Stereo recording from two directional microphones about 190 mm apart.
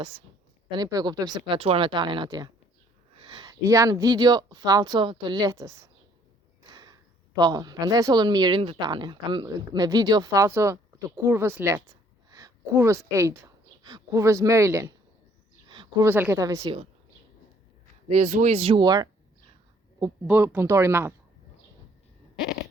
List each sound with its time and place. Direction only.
0.7 s speech: 20° right (ahead or behind)
6.7 s a sound: 20° right (ahead or behind)
7.3 s a woman's voice: 20° right (ahead or behind)
15.7 s a sound: 25° right (ahead or behind)
16.0 s speech: 10° right (ahead or behind)
18.1 s speech: 40° right (ahead or behind); by 21.1 s 15° right (ahead or behind)